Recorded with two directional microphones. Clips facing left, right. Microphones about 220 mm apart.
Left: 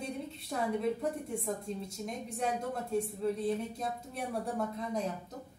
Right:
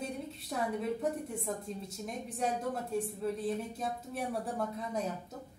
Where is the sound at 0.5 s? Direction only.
Centre (ahead or behind).